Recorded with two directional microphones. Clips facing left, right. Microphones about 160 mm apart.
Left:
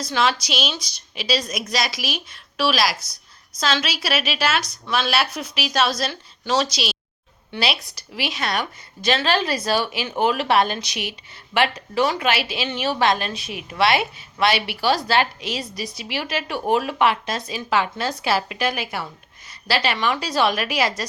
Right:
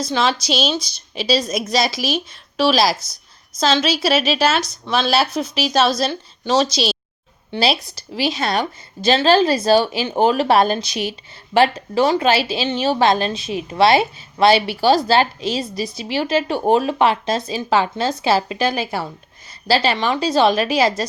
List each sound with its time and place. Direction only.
0.0 s a woman's voice: 25° right (ahead or behind)